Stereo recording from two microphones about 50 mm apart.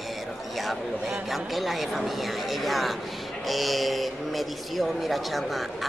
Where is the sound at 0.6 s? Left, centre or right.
Centre.